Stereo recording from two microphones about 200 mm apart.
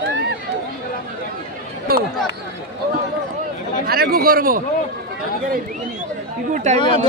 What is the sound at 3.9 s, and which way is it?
Speech, 50° right (ahead or behind).